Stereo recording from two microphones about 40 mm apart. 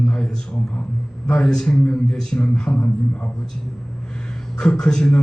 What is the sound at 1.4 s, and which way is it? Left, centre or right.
Speech, centre.